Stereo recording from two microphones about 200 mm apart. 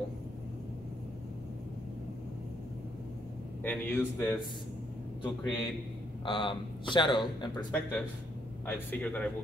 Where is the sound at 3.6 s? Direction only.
10° left (ahead or behind).